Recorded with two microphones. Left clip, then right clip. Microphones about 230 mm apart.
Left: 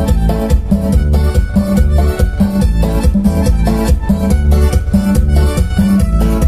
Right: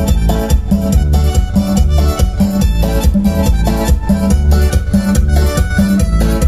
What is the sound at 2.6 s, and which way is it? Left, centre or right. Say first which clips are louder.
Music: even; right.